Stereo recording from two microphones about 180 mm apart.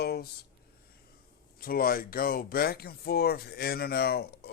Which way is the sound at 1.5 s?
55° left (ahead or behind).